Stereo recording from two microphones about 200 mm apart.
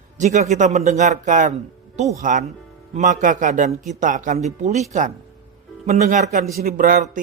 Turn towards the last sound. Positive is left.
turn(degrees=-45)  # may be behind; listen again after turning